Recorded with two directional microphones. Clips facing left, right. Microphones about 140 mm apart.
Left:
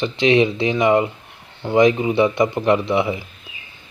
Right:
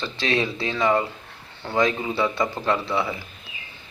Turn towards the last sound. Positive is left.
turn(degrees=20)  # may be behind; listen again after turning